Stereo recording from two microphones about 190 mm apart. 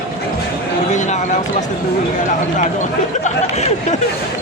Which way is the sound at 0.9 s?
40° left (ahead or behind).